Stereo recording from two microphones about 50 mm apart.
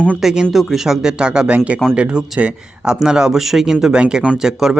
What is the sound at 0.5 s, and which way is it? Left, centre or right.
Speech, centre.